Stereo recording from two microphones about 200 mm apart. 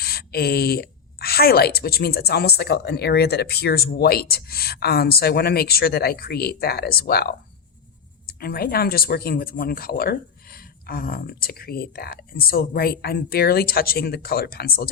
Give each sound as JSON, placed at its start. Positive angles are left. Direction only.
{"t": 0.0, "sound": "speech", "side_deg": 50}